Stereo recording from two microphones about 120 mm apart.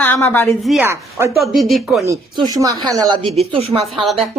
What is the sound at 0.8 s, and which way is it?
Speech, 20° right (ahead or behind).